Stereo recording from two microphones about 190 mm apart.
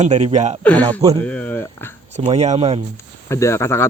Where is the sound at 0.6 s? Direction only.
5° left (ahead or behind).